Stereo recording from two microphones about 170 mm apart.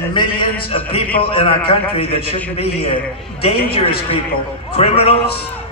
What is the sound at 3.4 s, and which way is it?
A man's voice, 35° left (ahead or behind).